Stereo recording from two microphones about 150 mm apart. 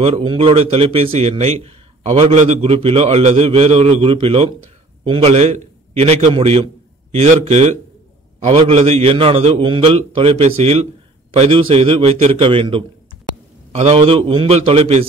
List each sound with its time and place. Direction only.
0.0 s a man's voice: 35° right (ahead or behind); by 2.6 s 55° right (ahead or behind)
2.6 s a man's voice: 40° right (ahead or behind)